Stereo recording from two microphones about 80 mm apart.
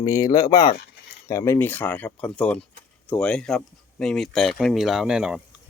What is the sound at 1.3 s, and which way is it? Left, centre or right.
Speech, left.